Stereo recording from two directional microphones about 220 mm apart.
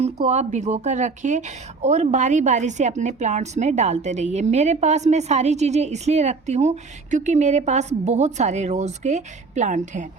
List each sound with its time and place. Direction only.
0.0 s a woman's voice: 30° right (ahead or behind)